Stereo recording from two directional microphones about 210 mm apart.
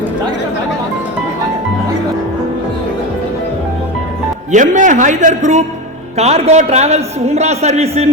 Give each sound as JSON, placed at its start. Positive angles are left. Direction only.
{"t": 4.5, "sound": "a man's voice", "side_deg": -35}